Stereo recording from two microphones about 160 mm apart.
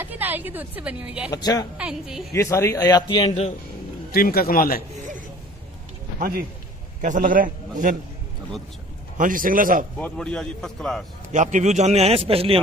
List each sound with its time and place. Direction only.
0.0 s a woman's voice: 10° right (ahead or behind)
1.3 s a man's voice: 25° left (ahead or behind)
1.8 s a man's voice: 5° right (ahead or behind)
2.3 s a man's voice: 15° left (ahead or behind)
4.1 s speech: 70° left (ahead or behind)
6.1 s a man's voice: 65° right (ahead or behind)
7.0 s a man's voice: 55° right (ahead or behind)
9.2 s a man's voice: 60° right (ahead or behind)
9.9 s a man's voice: 5° left (ahead or behind)
11.3 s a man's voice: 50° right (ahead or behind)